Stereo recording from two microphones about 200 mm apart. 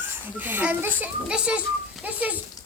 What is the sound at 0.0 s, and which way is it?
Speech, 10° right (ahead or behind).